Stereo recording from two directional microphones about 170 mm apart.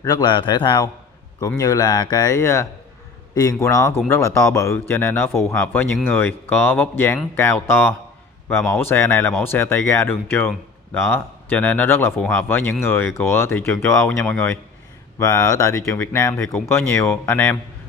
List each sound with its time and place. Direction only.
0.0 s speech: 20° left (ahead or behind); by 16.6 s 5° left (ahead or behind)
16.6 s speech: 15° left (ahead or behind)